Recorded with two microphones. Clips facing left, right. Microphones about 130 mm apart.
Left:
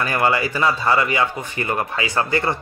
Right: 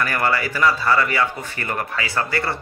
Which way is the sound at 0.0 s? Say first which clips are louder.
Left 2 dB; 20° left (ahead or behind).